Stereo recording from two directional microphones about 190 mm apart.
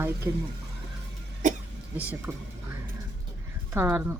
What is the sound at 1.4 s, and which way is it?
Cough, 40° right (ahead or behind).